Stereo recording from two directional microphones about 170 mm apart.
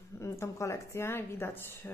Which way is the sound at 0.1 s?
15° left (ahead or behind).